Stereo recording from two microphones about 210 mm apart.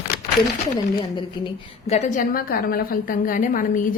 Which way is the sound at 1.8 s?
30° left (ahead or behind).